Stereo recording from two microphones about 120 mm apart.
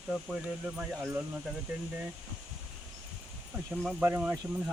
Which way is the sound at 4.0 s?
15° right (ahead or behind).